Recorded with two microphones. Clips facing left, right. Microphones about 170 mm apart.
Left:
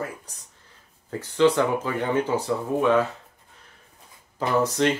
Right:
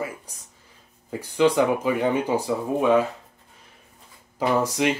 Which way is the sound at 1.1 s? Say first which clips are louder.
Even; 10° right (ahead or behind).